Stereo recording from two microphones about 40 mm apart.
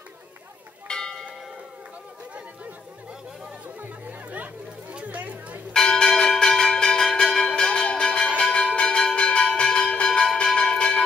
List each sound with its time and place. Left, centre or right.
0.8 s church bell: centre
4.0 s chatter: right
5.7 s church bell: centre
9.9 s bell: left